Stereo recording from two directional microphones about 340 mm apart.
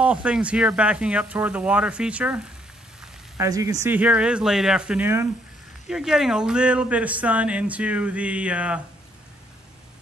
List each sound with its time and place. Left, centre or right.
0.0 s speech: centre